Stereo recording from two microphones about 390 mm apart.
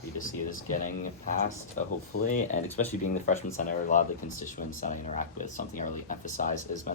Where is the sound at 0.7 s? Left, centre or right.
Centre.